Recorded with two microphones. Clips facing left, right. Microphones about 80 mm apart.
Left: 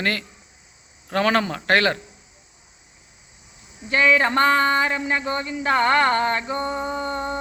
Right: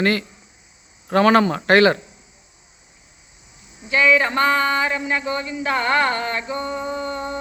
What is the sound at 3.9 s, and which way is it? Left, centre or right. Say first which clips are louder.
Speech: right 1 dB; left.